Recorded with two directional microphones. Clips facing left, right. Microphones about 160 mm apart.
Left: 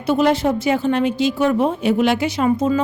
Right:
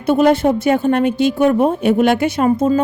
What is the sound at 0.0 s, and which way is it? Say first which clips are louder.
A woman's voice: right 4 dB; 50° right (ahead or behind).